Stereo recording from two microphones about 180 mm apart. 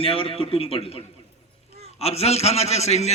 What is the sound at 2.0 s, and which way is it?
A man's voice, 35° left (ahead or behind).